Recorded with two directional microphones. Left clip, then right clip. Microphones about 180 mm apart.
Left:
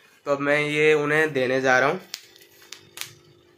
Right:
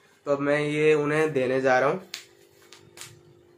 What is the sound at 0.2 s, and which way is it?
Speech, 5° left (ahead or behind).